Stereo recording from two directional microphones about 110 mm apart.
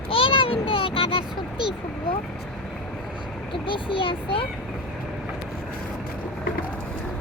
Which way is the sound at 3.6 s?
50° left (ahead or behind).